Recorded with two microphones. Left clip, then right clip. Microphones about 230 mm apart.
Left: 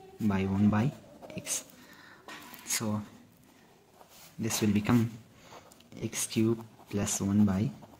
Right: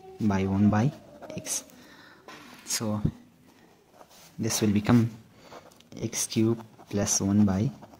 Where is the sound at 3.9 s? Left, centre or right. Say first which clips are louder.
Right 4 dB; centre.